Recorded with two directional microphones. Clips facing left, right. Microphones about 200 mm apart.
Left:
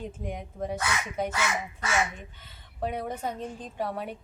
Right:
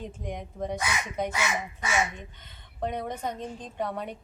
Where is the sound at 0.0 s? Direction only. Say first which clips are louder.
Even; 5° left (ahead or behind).